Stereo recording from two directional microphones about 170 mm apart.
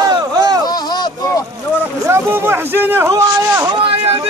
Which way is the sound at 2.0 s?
15° right (ahead or behind).